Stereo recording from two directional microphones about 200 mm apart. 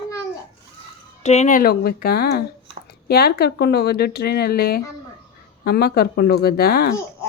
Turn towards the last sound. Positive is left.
turn(degrees=50)  # may be behind; listen again after turning